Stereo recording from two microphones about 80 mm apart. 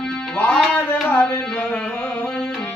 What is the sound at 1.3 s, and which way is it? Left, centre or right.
Music, centre.